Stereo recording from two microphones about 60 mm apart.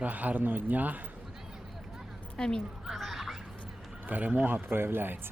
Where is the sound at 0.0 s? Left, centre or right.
Right.